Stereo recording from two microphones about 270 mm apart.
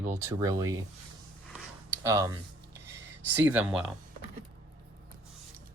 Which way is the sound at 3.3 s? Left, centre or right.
Centre.